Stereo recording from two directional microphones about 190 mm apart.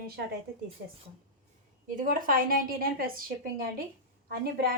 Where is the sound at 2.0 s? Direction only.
45° right (ahead or behind).